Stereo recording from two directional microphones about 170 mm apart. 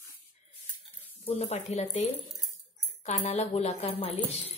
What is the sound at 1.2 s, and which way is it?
A woman's voice, 40° left (ahead or behind).